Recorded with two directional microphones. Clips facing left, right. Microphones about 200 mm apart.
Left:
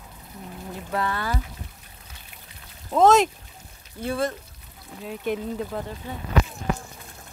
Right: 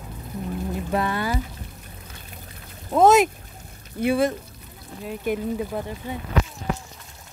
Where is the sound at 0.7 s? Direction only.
15° right (ahead or behind).